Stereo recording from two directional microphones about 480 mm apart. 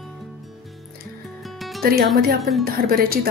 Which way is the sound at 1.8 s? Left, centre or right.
Centre.